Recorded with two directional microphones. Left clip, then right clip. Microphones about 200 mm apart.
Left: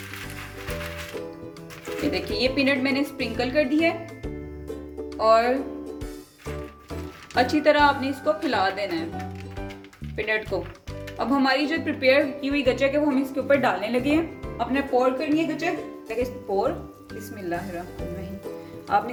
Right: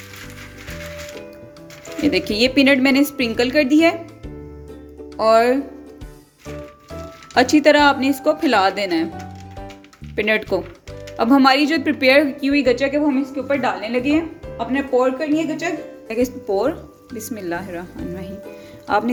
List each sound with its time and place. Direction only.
2.0 s speech: 55° right (ahead or behind)
5.1 s speech: 40° right (ahead or behind)
7.3 s speech: 50° right (ahead or behind)
10.2 s speech: 50° right (ahead or behind); by 13.0 s 30° right (ahead or behind)
13.3 s speech: centre (ahead or behind)
14.7 s speech: 30° right (ahead or behind); by 17.7 s 60° right (ahead or behind)
18.9 s music: 60° right (ahead or behind)